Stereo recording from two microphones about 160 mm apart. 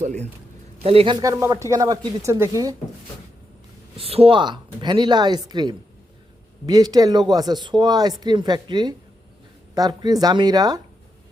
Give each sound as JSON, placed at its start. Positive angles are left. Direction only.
{"t": 0.0, "sound": "a man's voice", "side_deg": -50}
{"t": 0.8, "sound": "speech", "side_deg": -35}
{"t": 3.9, "sound": "speech", "side_deg": -40}